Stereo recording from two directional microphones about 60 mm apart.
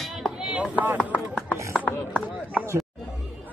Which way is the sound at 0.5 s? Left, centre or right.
Right.